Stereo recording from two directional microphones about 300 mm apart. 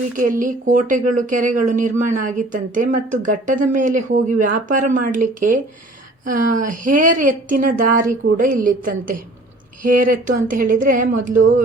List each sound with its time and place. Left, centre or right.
0.2 s speech: right